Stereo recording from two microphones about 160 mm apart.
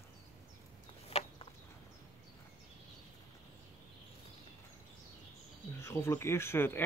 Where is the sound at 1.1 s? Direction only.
40° left (ahead or behind).